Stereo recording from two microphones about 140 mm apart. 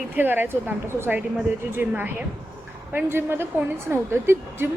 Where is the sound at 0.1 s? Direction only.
15° right (ahead or behind).